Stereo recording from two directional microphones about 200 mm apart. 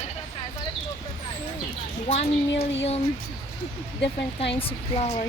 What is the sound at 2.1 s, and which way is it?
Speech, 35° left (ahead or behind).